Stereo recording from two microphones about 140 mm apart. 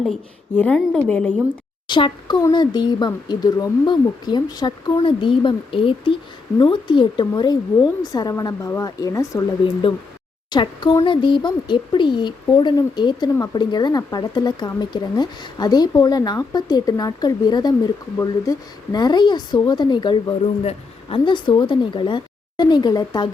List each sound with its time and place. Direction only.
0.0 s a woman's voice: 5° left (ahead or behind)
1.9 s a woman's voice: 35° left (ahead or behind)
10.5 s a woman's voice: 35° left (ahead or behind)